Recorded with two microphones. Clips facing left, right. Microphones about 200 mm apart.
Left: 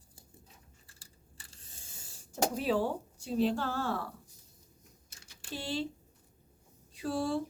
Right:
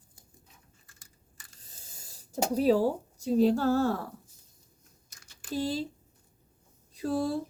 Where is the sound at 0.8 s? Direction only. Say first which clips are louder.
Left 1 dB; 30° left (ahead or behind).